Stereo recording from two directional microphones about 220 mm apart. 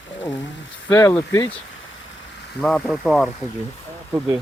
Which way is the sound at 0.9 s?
10° left (ahead or behind).